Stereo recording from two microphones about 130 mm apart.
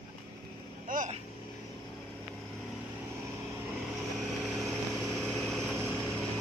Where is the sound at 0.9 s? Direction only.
90° right.